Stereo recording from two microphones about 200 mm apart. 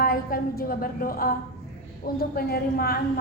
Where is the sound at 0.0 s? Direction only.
45° left (ahead or behind).